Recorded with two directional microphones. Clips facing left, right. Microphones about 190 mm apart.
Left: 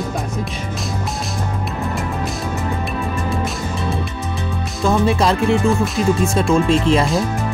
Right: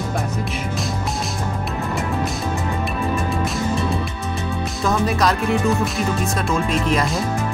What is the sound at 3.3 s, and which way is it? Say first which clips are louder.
Music: right 1 dB; centre (ahead or behind).